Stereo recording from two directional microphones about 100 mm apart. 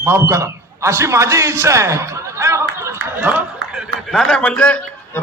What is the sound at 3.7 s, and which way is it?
A man's voice, centre (ahead or behind).